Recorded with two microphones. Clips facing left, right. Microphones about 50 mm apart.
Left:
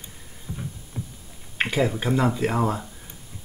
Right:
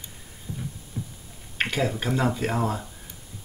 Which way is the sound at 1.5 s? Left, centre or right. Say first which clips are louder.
Left 2 dB; centre.